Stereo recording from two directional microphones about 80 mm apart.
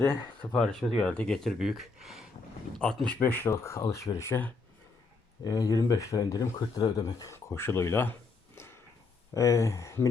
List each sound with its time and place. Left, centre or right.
0.0 s speech: left
0.5 s speech: centre
1.5 s speech: centre
2.7 s speech: centre; by 3.5 s left
3.5 s speech: left
4.3 s speech: left
5.4 s speech: left
7.3 s speech: left
8.5 s a sound: left
9.3 s speech: left